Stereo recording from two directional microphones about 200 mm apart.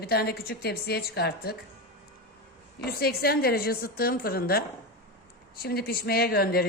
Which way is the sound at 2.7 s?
50° left (ahead or behind).